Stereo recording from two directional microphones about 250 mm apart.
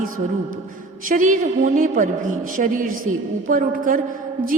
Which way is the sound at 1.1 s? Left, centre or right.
Right.